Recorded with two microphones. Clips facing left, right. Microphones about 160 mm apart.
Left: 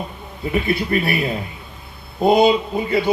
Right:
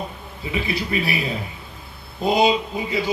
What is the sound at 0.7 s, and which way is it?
A man's voice, 55° left (ahead or behind).